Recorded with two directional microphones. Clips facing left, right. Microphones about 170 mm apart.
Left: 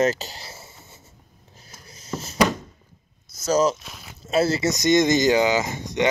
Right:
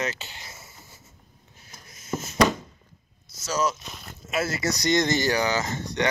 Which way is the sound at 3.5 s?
35° left (ahead or behind).